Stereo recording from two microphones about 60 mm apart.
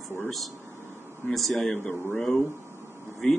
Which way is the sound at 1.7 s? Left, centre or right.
Left.